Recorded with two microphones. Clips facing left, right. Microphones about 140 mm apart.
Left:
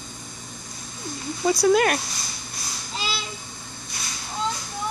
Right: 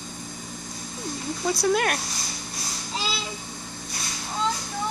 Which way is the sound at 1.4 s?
Centre (ahead or behind).